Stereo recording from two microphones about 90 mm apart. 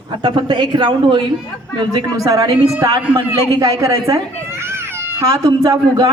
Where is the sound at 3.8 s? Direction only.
35° right (ahead or behind).